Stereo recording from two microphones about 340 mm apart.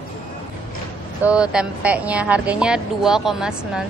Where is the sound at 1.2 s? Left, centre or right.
Centre.